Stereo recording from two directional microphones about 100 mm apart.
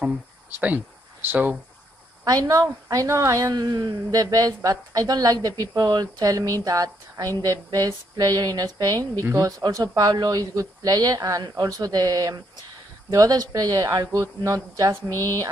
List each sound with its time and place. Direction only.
0.0 s speech: 15° right (ahead or behind)
2.2 s a woman's voice: 40° right (ahead or behind)
9.2 s speech: 25° right (ahead or behind)
9.6 s a woman's voice: 40° right (ahead or behind)